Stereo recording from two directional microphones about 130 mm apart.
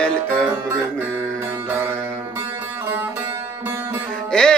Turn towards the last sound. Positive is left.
turn(degrees=5)  # may be behind; listen again after turning